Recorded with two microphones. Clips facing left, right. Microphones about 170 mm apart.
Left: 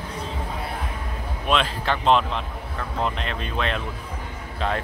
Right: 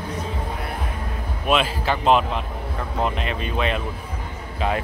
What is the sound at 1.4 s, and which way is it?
Speech, 5° right (ahead or behind).